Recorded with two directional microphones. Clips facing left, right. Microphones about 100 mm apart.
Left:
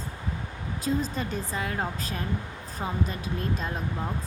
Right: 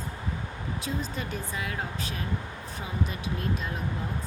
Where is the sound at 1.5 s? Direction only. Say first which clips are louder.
Left 4 dB; 35° left (ahead or behind).